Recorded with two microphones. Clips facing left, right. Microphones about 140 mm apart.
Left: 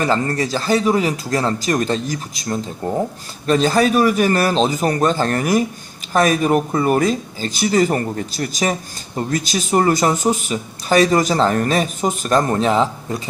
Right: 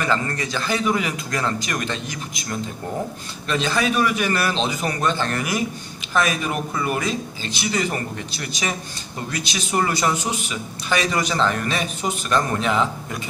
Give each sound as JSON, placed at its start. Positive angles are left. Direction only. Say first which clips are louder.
{"t": 0.0, "sound": "speech", "louder": "left 5 dB", "side_deg": 35}